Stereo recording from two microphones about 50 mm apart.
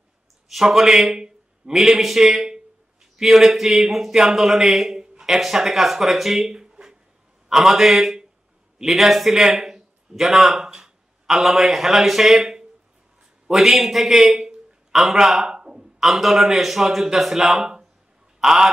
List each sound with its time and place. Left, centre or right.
0.5 s a man's voice: centre
1.1 s a sound: centre
1.8 s a man's voice: centre
15.5 s a sound: centre
16.0 s a man's voice: centre
18.4 s fowl: centre